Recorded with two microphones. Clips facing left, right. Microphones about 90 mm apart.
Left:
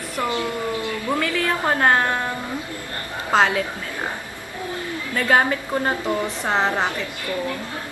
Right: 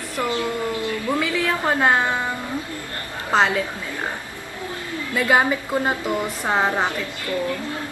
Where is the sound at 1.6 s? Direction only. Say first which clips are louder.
Left 1 dB; 5° right (ahead or behind).